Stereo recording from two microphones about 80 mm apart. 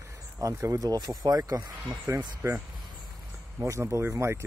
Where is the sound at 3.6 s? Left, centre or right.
Right.